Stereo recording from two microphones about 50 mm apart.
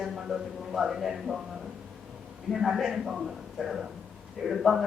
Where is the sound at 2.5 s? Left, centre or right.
Centre.